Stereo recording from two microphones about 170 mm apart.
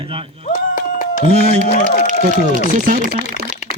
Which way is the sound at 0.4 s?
50° left (ahead or behind).